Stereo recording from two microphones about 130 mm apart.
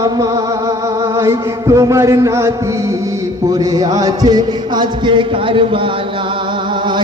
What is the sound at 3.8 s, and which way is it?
A man's voice, 30° right (ahead or behind).